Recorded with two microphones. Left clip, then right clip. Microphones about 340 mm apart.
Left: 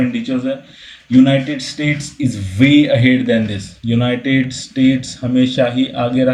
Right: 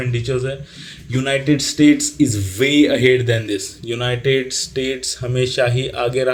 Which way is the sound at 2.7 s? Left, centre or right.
Right.